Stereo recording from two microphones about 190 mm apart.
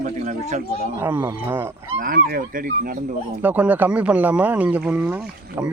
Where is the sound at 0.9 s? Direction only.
10° right (ahead or behind).